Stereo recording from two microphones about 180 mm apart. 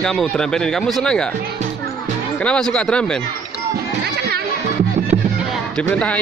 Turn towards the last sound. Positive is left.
turn(degrees=5)  # may be behind; listen again after turning